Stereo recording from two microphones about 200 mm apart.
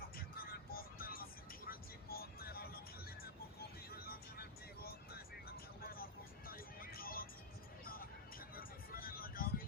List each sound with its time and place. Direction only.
0.2 s vehicle: 45° left (ahead or behind)
3.9 s vehicle: 50° left (ahead or behind)
6.5 s music: 45° left (ahead or behind)
8.5 s vehicle: 45° left (ahead or behind)